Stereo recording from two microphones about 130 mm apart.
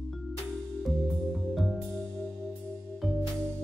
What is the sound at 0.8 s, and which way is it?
Music, centre (ahead or behind).